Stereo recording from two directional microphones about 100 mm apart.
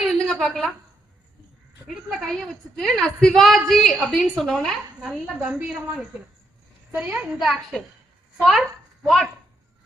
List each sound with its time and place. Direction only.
0.0 s a sound: centre (ahead or behind)
2.0 s a woman's voice: centre (ahead or behind); by 7.3 s 15° right (ahead or behind)
7.3 s a woman's voice: centre (ahead or behind)